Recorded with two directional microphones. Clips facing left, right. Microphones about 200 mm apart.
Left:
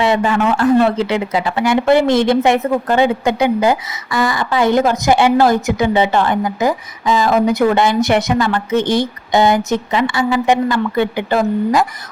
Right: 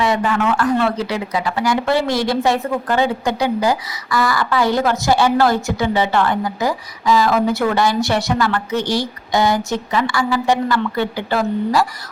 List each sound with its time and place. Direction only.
0.0 s speech: 25° left (ahead or behind)